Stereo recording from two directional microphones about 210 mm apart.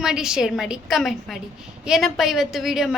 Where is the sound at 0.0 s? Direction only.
5° right (ahead or behind).